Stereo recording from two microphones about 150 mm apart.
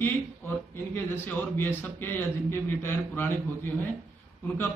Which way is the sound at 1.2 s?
15° left (ahead or behind).